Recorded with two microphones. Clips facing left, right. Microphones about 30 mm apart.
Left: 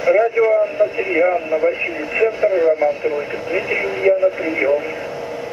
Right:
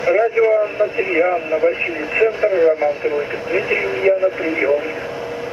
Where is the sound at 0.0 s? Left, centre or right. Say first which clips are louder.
Even; centre.